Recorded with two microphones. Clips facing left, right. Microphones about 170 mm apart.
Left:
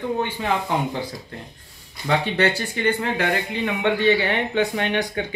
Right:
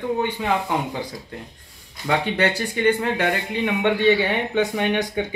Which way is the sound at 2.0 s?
15° right (ahead or behind).